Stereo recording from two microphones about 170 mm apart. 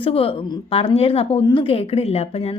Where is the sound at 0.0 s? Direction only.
35° left (ahead or behind).